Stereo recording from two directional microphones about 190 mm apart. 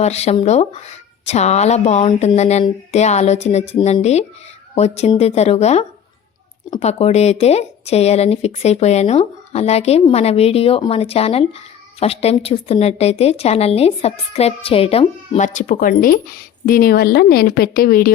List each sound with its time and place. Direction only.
0.0 s a woman's voice: 35° left (ahead or behind)